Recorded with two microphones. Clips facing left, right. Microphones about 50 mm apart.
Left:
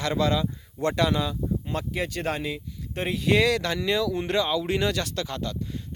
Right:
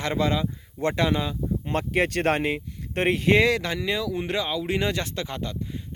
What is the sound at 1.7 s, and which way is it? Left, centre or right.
Speech, right.